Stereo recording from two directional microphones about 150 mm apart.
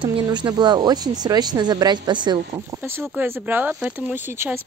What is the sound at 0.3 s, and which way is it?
Speech, 30° right (ahead or behind).